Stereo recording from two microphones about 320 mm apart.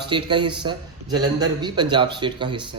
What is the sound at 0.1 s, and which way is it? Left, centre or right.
A man's voice, centre.